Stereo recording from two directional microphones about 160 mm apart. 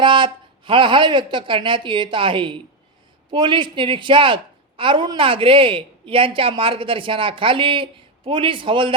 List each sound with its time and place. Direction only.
0.0 s a woman's voice: 30° right (ahead or behind)